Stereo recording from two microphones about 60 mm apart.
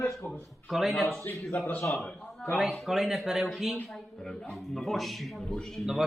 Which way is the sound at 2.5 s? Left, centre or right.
Centre.